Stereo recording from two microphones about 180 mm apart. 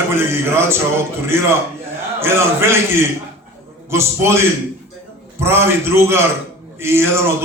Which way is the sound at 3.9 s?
15° right (ahead or behind).